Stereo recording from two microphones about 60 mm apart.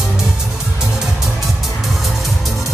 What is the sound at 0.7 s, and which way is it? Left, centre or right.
Music, centre.